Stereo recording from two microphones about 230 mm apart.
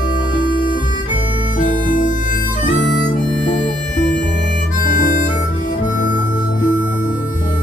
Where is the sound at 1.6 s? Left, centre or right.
Left.